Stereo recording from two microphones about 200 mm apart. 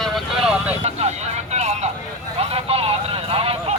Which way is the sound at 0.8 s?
35° right (ahead or behind).